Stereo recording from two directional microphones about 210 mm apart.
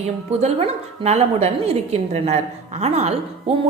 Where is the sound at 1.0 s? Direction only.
30° right (ahead or behind).